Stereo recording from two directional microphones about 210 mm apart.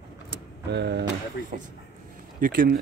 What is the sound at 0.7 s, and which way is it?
Speech, 50° right (ahead or behind).